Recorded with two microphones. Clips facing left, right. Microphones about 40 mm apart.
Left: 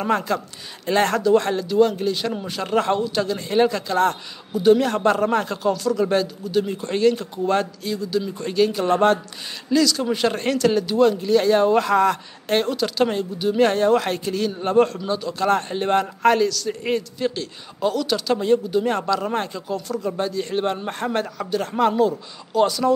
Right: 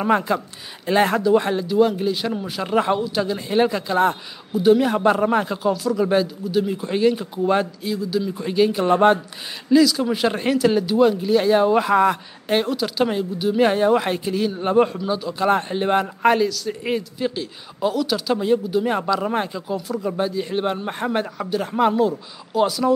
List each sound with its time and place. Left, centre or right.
0.0 s a man's voice: centre